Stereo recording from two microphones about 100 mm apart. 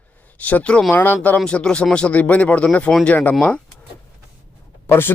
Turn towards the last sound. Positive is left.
turn(degrees=25)  # may be behind; listen again after turning